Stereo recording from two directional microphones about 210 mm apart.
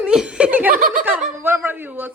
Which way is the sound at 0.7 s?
40° right (ahead or behind).